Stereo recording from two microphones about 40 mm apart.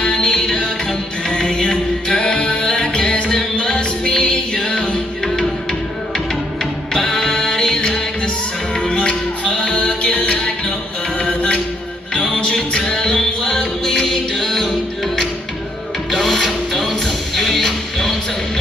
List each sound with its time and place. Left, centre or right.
0.0 s music: left
8.7 s music: left; by 14.7 s centre
16.1 s music: centre